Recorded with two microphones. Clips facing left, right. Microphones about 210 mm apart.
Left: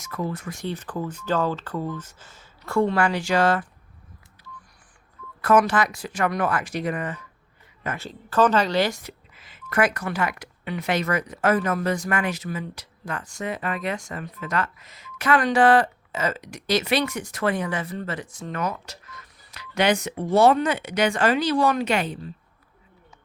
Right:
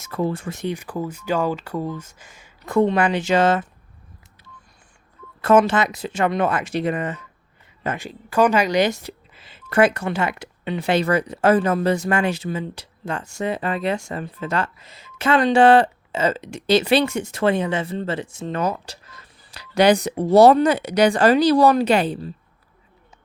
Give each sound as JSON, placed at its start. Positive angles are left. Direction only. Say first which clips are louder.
{"t": 0.0, "sound": "speech", "louder": "right 5 dB", "side_deg": -30}
{"t": 5.4, "sound": "speech", "louder": "right 3 dB", "side_deg": -25}
{"t": 7.9, "sound": "speech", "louder": "right 2 dB", "side_deg": -15}
{"t": 9.0, "sound": "speech", "louder": "right 5 dB", "side_deg": -30}